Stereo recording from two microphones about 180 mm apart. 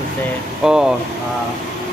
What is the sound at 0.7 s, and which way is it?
Speech, 5° right (ahead or behind).